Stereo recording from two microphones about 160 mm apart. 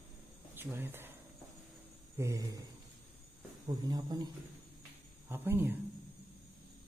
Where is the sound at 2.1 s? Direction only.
20° right (ahead or behind).